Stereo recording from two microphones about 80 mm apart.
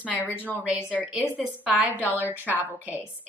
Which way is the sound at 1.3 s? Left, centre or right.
Centre.